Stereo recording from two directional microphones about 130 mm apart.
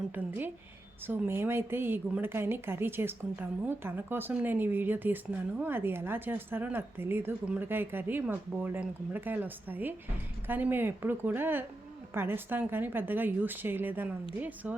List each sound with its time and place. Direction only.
0.1 s a woman's voice: 15° right (ahead or behind)